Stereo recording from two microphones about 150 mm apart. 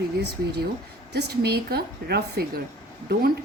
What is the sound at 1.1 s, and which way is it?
A woman's voice, 90° right.